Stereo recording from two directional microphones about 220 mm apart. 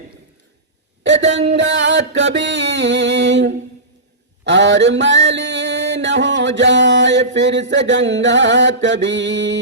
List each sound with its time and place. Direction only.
1.3 s mantra: 55° right (ahead or behind)